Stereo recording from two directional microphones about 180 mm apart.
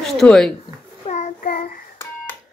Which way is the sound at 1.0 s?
40° left (ahead or behind).